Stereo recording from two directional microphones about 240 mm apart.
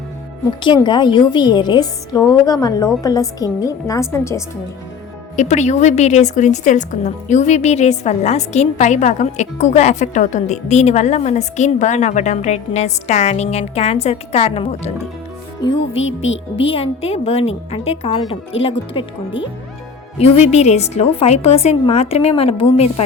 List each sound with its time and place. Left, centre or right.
0.6 s a woman's voice: centre
5.4 s a woman's voice: left
15.7 s speech: left
16.6 s a woman's voice: left
20.5 s a woman's voice: left